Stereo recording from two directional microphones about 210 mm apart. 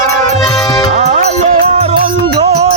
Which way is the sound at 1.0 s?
35° right (ahead or behind).